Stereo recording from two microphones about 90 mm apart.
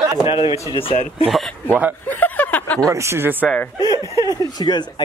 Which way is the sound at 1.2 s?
15° right (ahead or behind).